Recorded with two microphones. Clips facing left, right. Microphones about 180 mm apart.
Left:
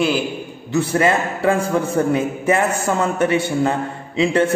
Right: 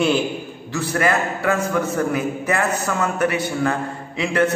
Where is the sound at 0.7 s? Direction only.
25° left (ahead or behind).